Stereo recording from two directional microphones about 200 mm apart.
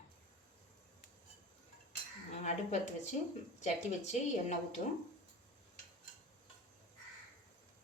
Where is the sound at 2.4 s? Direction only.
35° left (ahead or behind).